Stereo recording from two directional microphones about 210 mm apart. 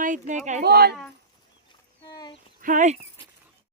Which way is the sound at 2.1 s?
20° left (ahead or behind).